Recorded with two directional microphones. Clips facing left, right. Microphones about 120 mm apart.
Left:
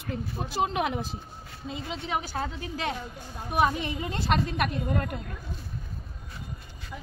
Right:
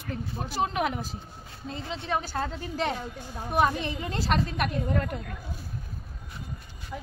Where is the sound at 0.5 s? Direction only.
20° left (ahead or behind).